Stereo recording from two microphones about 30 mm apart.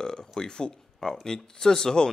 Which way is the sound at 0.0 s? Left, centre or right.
Left.